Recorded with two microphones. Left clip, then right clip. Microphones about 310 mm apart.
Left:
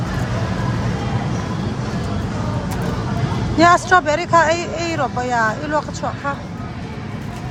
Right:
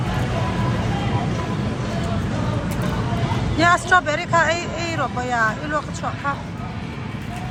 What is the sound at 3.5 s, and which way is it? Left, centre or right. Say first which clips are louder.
Speech: left 4 dB; centre.